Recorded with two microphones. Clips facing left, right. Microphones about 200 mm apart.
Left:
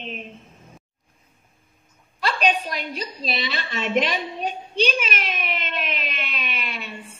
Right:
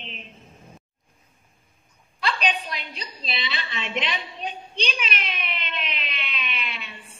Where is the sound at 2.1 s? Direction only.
45° left (ahead or behind).